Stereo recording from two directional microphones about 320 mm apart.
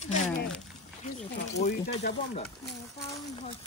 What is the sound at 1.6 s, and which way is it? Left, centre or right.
Speech, left.